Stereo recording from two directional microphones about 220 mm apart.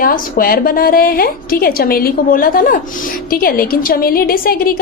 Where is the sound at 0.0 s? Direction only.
40° left (ahead or behind).